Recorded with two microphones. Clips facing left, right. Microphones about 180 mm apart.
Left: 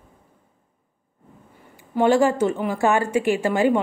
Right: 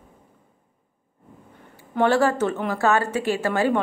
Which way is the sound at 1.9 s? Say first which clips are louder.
Left 2 dB; 15° left (ahead or behind).